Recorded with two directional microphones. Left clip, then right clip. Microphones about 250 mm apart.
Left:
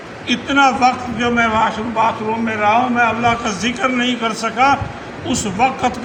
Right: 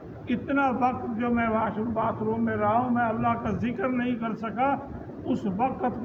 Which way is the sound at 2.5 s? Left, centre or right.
Centre.